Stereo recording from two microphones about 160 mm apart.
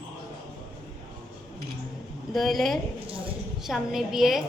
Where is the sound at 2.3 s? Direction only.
Centre (ahead or behind).